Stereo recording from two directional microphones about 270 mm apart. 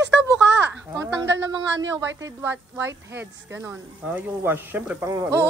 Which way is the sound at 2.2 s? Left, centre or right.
Centre.